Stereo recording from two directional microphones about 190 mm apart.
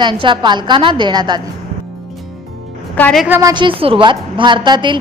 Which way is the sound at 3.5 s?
25° right (ahead or behind).